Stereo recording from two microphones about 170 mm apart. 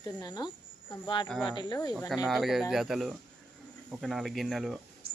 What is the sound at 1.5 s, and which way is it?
Speech, 25° left (ahead or behind).